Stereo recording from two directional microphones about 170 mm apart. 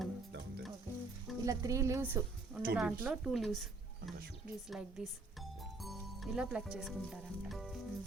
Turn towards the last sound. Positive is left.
turn(degrees=-5)  # may be behind; listen again after turning